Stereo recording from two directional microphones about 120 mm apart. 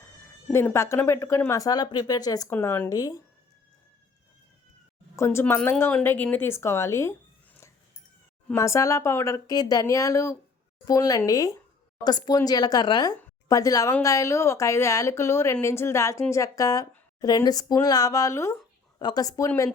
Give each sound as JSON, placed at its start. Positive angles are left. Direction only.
{"t": 0.5, "sound": "speech", "side_deg": 20}
{"t": 2.5, "sound": "speech", "side_deg": 20}
{"t": 2.9, "sound": "speech", "side_deg": 30}
{"t": 5.1, "sound": "speech", "side_deg": 20}
{"t": 8.5, "sound": "speech", "side_deg": 25}
{"t": 18.9, "sound": "speech", "side_deg": 35}